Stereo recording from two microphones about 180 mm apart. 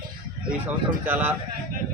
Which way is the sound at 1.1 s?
10° right (ahead or behind).